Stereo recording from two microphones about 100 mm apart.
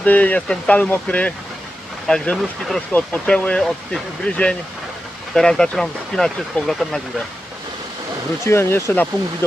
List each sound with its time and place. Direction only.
0.0 s speech: 15° left (ahead or behind)
8.4 s speech: 25° left (ahead or behind)